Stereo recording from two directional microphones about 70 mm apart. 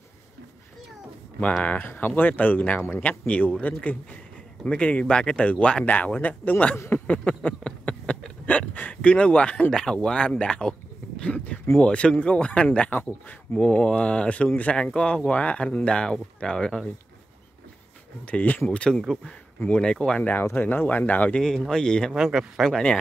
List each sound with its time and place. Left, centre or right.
1.6 s a man's voice: left
6.9 s a sound: centre
11.8 s a man's voice: centre
18.2 s a man's voice: left
18.9 s a man's voice: centre
20.4 s speech: left
21.6 s a man's voice: centre
22.1 s speech: centre
22.7 s a man's voice: centre